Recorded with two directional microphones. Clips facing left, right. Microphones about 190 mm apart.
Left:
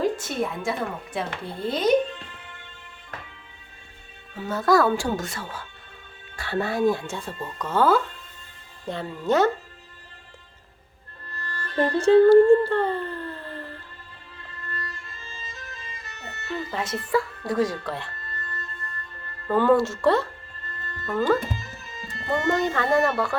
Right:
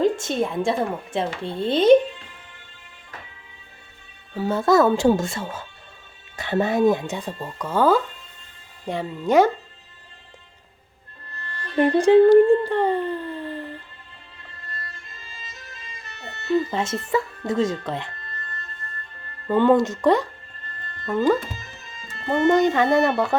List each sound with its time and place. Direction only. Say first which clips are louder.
0.0 s a woman's voice: right 4 dB; 25° right (ahead or behind)
4.4 s speech: right 3 dB; 30° right (ahead or behind); by 9.5 s 15° right (ahead or behind)
11.6 s music: right 4 dB; 20° right (ahead or behind)
16.1 s a sound: right 3 dB; 40° left (ahead or behind)
16.5 s speech: right 7 dB; 25° right (ahead or behind)
19.5 s speech: right 2 dB; 20° right (ahead or behind)
22.0 s speech: right 5 dB; 20° right (ahead or behind)